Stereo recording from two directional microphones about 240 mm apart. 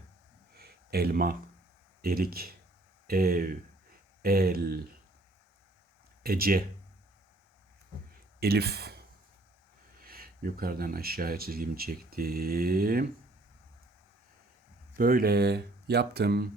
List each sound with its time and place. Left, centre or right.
0.5 s a sound: right
2.0 s speech: right
6.2 s speech: right
8.4 s speech: right
10.0 s speech: right
14.9 s speech: right